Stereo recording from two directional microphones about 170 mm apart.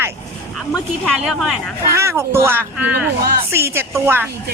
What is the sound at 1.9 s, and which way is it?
Speech, 15° right (ahead or behind).